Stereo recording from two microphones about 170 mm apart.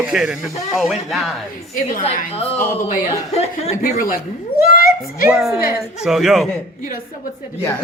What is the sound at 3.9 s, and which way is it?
Speech, 55° left (ahead or behind).